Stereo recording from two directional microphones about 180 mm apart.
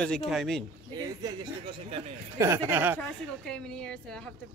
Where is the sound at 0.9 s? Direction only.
20° right (ahead or behind).